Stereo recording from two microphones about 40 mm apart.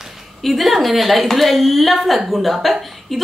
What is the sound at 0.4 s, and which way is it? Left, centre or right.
A woman's voice, centre.